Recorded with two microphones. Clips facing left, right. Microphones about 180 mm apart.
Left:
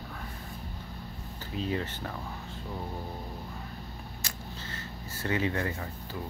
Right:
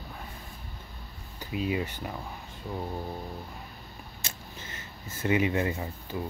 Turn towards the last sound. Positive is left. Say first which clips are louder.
# right 4 dB
turn(degrees=-20)  # may be behind; listen again after turning